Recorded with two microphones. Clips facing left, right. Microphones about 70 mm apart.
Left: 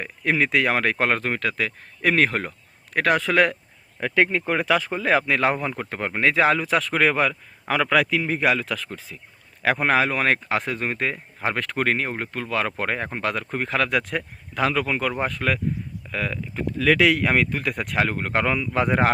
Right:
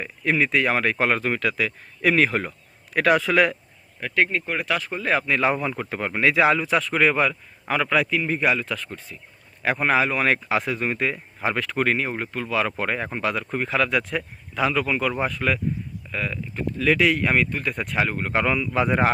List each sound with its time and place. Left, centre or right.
0.0 s speech: left
4.9 s speech: left
5.5 s speech: left
6.6 s speech: left
7.7 s speech: left
9.6 s speech: left
15.2 s speech: left
16.1 s speech: left
18.5 s speech: left